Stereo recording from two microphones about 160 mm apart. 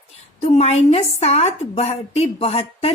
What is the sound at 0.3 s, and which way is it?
A woman's voice, 40° left (ahead or behind).